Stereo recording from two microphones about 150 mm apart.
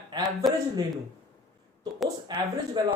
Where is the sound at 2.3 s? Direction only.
30° right (ahead or behind).